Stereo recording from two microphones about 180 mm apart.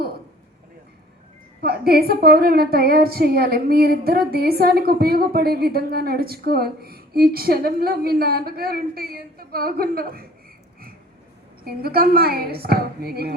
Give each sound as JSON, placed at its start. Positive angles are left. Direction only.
{"t": 1.6, "sound": "a woman's voice", "side_deg": -60}
{"t": 11.6, "sound": "a woman's voice", "side_deg": -55}